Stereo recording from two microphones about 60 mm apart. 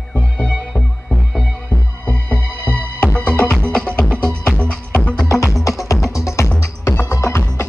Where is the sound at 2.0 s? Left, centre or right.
Left.